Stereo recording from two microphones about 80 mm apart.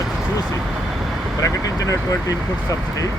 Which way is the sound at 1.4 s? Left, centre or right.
Left.